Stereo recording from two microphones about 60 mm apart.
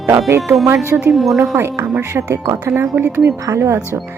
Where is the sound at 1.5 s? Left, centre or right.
Right.